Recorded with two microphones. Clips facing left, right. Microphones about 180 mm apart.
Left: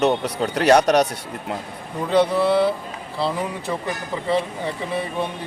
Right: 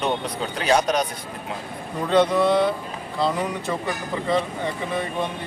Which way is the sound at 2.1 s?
5° left (ahead or behind).